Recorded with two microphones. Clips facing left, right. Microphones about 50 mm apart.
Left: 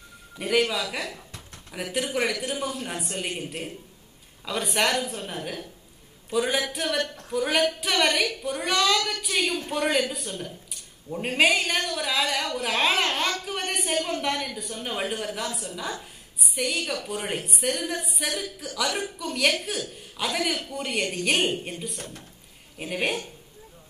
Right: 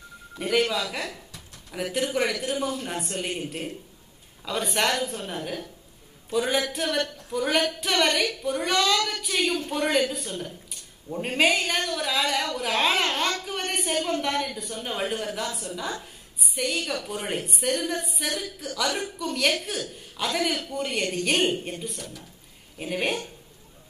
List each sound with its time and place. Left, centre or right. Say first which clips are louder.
0.4 s a woman's voice: even; centre
10.4 s a sound: even; centre
11.1 s a woman's voice: left 1 dB; centre
21.9 s speech: even; left
22.8 s a woman's voice: even; centre